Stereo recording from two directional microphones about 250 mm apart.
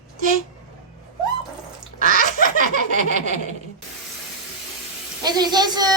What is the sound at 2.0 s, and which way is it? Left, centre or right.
Duck, right.